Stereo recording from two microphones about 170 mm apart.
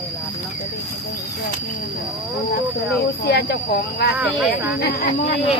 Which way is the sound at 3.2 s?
70° left (ahead or behind).